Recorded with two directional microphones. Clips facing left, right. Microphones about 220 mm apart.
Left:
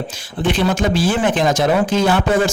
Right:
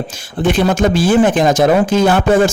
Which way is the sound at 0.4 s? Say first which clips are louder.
Right 4 dB; 45° right (ahead or behind).